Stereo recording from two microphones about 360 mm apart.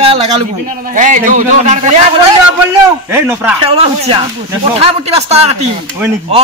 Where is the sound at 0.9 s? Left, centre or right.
Right.